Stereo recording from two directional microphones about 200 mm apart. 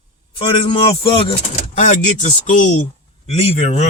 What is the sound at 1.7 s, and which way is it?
Speech, 40° left (ahead or behind).